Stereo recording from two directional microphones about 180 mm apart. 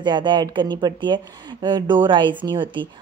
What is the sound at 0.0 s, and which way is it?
A woman's voice, 25° right (ahead or behind).